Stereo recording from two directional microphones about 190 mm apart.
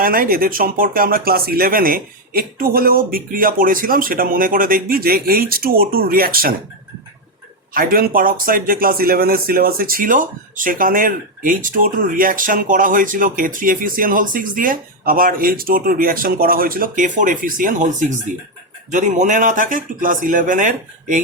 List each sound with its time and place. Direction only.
0.0 s speech: 50° right (ahead or behind)
7.7 s speech: 50° right (ahead or behind)